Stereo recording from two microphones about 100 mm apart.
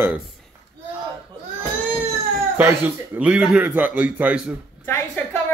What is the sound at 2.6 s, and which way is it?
Speech, 20° right (ahead or behind).